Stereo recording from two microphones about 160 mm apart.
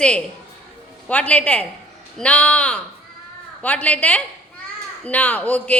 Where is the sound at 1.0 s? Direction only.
10° left (ahead or behind).